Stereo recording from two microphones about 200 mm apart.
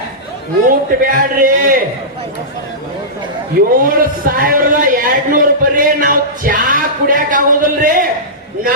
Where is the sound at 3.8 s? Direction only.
45° right (ahead or behind).